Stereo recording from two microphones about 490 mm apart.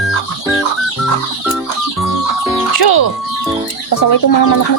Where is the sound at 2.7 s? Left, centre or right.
Left.